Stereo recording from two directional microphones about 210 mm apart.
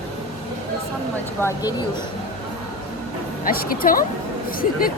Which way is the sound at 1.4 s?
20° left (ahead or behind).